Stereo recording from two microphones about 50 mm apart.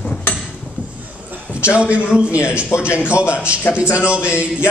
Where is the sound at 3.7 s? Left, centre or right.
Left.